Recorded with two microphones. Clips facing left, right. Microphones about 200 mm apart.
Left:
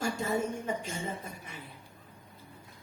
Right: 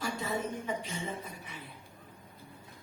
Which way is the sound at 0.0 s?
45° left (ahead or behind).